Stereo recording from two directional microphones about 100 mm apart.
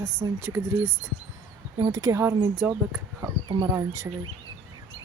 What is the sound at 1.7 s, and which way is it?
Speech, 40° right (ahead or behind).